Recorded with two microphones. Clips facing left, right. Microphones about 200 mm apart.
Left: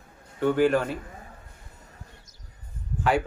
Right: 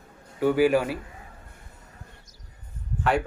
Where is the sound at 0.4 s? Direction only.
5° right (ahead or behind).